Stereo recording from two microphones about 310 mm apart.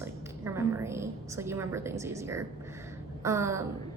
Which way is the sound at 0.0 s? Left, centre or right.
Centre.